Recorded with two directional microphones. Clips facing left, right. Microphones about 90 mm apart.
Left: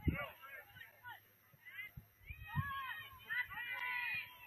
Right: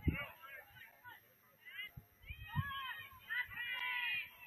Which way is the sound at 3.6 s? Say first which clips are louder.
Even; 15° left (ahead or behind).